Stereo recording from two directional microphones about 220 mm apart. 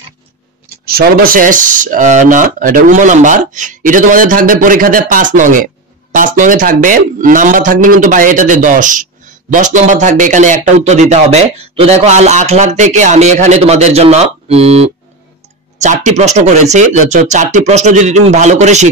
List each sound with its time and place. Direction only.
0.8 s speech: 40° right (ahead or behind)